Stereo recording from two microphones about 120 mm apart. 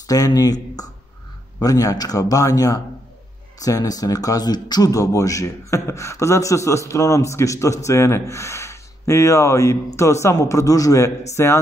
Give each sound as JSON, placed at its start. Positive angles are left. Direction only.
{"t": 0.0, "sound": "speech", "side_deg": 30}